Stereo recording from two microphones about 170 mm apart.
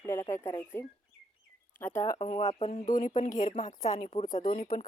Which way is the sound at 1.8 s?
15° left (ahead or behind).